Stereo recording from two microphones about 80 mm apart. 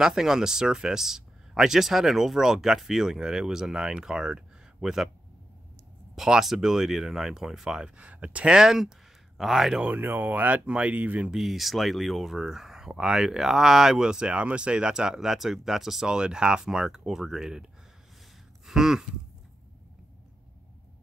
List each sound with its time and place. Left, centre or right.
0.0 s speech: centre
6.1 s speech: centre
8.0 s speech: centre
9.8 s speech: right
11.3 s speech: centre
18.7 s a sound: centre